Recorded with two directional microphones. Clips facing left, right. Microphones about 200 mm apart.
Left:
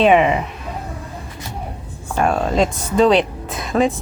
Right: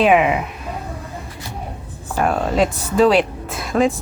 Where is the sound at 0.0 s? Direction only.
5° right (ahead or behind).